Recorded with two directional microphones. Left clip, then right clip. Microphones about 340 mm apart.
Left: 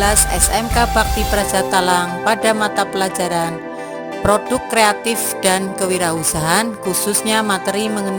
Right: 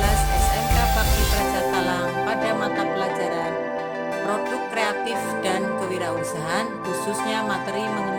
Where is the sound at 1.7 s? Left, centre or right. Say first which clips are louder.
Left 7 dB; left.